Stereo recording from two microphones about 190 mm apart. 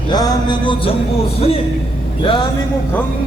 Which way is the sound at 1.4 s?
30° left (ahead or behind).